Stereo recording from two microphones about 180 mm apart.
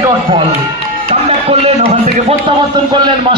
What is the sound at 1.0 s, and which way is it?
Music, 45° right (ahead or behind).